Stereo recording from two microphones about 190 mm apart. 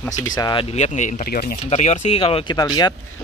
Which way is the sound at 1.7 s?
35° left (ahead or behind).